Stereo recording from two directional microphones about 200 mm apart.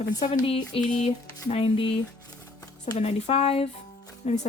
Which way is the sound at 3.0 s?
30° left (ahead or behind).